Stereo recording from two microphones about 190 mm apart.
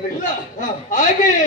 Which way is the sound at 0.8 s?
40° left (ahead or behind).